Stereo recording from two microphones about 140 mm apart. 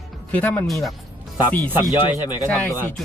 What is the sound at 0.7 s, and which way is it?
Music, centre (ahead or behind).